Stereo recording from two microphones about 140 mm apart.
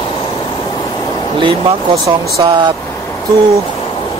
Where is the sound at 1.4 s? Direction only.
35° right (ahead or behind).